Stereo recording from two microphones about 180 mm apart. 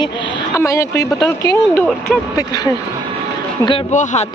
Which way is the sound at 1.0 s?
15° left (ahead or behind).